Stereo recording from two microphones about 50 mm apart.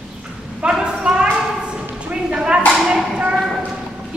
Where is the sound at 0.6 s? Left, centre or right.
Centre.